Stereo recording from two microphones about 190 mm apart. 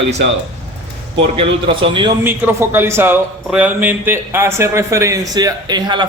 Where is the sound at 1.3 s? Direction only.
25° right (ahead or behind).